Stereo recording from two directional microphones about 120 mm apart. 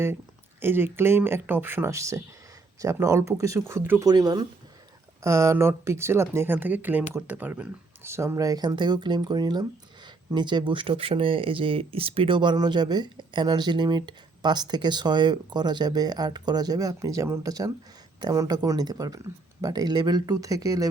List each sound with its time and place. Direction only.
0.6 s speech: 20° right (ahead or behind)
4.0 s speech: 35° right (ahead or behind)
5.2 s speech: 25° right (ahead or behind)